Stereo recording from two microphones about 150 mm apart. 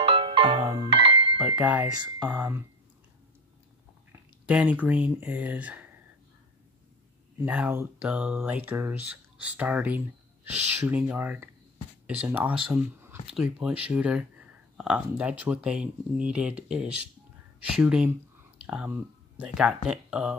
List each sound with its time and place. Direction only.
0.0 s music: 40° right (ahead or behind)
1.4 s a sound: 10° right (ahead or behind)
2.1 s speech: 15° right (ahead or behind)
4.5 s speech: 10° right (ahead or behind)
7.4 s speech: 10° right (ahead or behind)
18.6 s a sound: 10° right (ahead or behind)
19.3 s speech: 5° right (ahead or behind)